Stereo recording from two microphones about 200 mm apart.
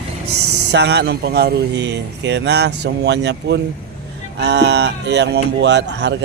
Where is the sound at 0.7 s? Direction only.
55° right (ahead or behind).